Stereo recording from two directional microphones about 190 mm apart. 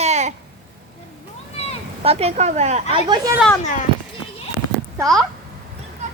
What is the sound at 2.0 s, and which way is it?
Speech, 30° right (ahead or behind).